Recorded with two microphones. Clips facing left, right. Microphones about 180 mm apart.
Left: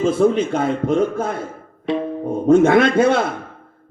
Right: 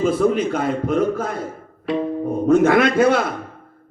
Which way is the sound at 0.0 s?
25° left (ahead or behind).